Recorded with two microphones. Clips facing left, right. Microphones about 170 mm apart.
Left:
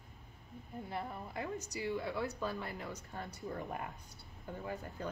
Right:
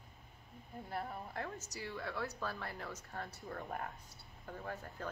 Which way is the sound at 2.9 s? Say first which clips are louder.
Left 1 dB; 5° right (ahead or behind).